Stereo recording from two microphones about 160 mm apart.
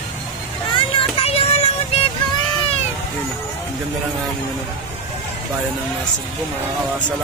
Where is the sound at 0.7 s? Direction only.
35° left (ahead or behind).